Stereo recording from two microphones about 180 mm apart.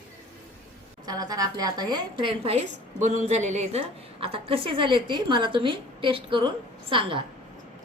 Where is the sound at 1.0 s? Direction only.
20° right (ahead or behind).